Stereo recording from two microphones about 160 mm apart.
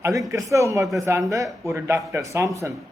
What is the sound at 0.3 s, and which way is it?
Speech, 20° right (ahead or behind).